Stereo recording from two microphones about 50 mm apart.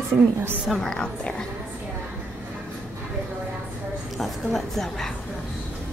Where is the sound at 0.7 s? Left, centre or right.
Centre.